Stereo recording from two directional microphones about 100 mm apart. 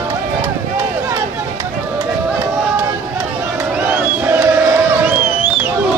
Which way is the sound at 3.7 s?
20° right (ahead or behind).